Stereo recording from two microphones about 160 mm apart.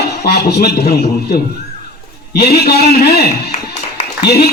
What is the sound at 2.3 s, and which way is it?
Speech, 80° left.